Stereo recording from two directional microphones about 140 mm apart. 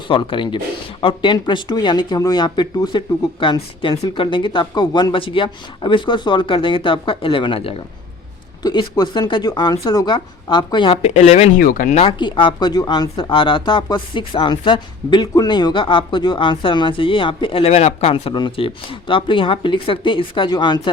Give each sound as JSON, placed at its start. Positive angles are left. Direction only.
{"t": 0.1, "sound": "speech", "side_deg": 35}
{"t": 8.6, "sound": "speech", "side_deg": 30}
{"t": 11.0, "sound": "speech", "side_deg": 50}
{"t": 11.5, "sound": "speech", "side_deg": 80}
{"t": 11.9, "sound": "speech", "side_deg": 40}